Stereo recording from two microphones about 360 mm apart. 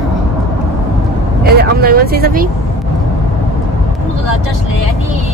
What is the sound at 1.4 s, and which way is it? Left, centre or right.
Speech, right.